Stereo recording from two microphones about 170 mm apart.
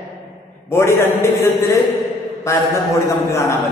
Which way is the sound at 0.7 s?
15° left (ahead or behind).